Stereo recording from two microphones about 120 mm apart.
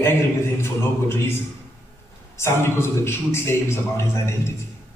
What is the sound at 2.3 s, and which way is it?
A man's voice, 20° left (ahead or behind).